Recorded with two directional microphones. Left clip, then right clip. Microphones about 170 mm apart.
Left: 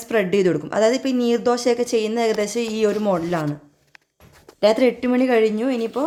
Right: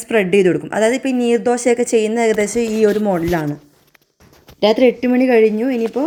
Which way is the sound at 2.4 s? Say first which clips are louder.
Right 5 dB; 10° right (ahead or behind).